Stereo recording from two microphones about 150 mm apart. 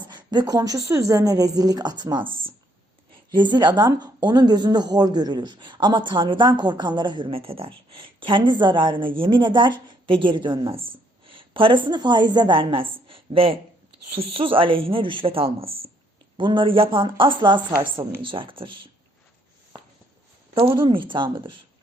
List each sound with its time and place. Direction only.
0.1 s speech: 30° right (ahead or behind)
3.3 s speech: 30° right (ahead or behind)
20.6 s speech: 35° right (ahead or behind)